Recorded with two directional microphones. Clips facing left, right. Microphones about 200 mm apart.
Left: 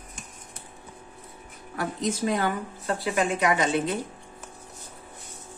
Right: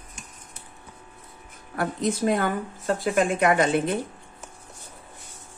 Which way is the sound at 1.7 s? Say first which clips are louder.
Right 3 dB; 55° right (ahead or behind).